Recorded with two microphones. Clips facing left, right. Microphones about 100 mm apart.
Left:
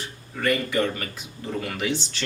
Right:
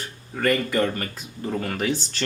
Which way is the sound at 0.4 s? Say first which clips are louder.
Right 2 dB; 40° right (ahead or behind).